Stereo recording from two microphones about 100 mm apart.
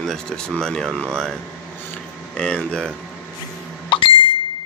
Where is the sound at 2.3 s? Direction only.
10° left (ahead or behind).